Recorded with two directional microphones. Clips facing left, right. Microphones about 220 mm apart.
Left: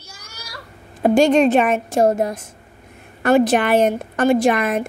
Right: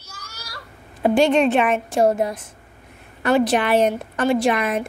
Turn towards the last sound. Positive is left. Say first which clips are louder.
# left 3 dB
turn(degrees=45)  # may be behind; listen again after turning